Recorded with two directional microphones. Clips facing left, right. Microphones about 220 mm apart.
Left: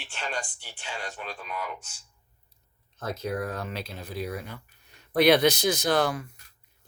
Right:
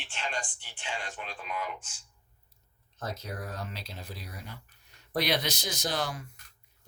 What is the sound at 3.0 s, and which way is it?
Speech, 55° left (ahead or behind).